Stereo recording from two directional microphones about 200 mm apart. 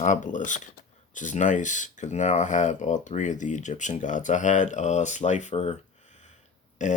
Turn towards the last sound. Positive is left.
turn(degrees=35)  # may be behind; listen again after turning